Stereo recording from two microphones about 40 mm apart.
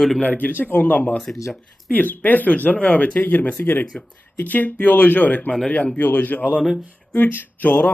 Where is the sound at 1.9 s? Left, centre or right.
Left.